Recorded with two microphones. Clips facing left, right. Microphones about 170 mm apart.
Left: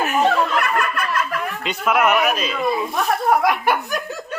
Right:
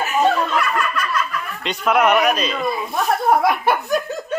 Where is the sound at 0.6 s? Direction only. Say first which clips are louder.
Even; 55° left (ahead or behind).